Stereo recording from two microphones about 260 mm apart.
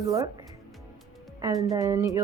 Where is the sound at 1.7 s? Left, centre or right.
Centre.